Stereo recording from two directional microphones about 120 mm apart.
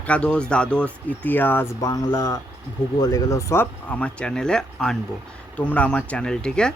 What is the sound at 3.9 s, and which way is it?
Speech, 10° left (ahead or behind).